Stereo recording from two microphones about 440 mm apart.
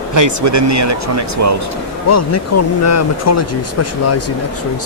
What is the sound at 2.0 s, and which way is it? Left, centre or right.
Speech, left.